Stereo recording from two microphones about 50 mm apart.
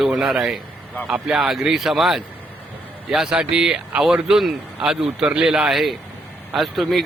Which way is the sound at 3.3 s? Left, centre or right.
Centre.